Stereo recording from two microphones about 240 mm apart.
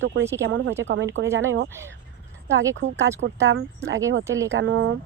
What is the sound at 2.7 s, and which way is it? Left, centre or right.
Speech, right.